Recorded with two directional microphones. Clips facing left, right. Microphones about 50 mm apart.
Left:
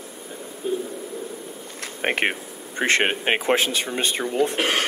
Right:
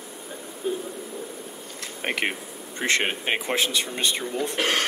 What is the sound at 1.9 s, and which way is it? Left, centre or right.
Speech, left.